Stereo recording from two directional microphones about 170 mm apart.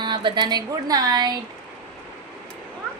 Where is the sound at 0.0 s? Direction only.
25° right (ahead or behind).